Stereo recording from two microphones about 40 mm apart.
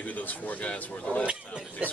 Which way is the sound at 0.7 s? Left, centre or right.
Left.